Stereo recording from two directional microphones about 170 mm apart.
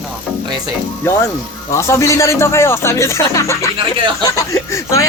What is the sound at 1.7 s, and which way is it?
Speech, 15° left (ahead or behind).